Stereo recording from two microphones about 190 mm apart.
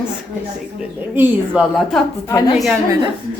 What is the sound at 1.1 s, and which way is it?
Speech, 10° right (ahead or behind).